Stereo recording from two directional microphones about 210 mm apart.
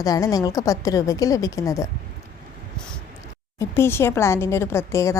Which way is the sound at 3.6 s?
10° left (ahead or behind).